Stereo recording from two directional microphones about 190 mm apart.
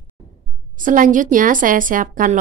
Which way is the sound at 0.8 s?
45° right (ahead or behind).